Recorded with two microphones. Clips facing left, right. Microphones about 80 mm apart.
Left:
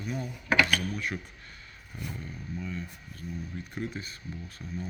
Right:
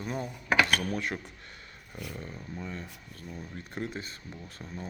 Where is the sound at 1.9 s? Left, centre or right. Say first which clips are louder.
Even; right.